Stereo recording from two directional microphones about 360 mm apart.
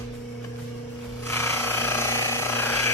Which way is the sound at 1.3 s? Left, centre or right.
Centre.